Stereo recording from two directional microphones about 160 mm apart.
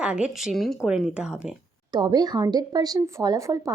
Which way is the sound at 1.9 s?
25° right (ahead or behind).